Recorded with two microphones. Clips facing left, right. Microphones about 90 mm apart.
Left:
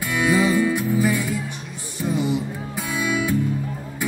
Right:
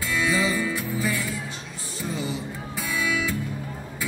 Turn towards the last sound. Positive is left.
turn(degrees=20)  # may be behind; listen again after turning